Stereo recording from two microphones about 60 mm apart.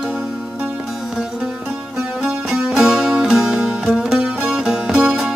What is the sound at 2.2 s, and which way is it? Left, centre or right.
Music, centre.